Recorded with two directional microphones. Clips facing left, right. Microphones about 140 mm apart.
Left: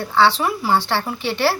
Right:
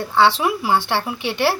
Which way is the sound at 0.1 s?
15° right (ahead or behind).